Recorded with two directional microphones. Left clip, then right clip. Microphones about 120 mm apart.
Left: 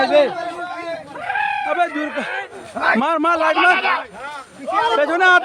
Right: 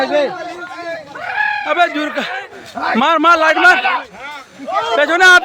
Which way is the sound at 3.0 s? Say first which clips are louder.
Right 6 dB; 60° right (ahead or behind).